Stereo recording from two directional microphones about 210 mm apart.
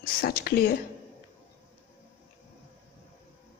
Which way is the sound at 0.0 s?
45° left (ahead or behind).